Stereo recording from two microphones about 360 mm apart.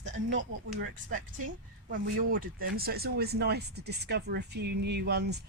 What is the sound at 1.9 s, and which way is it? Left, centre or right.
Speech, right.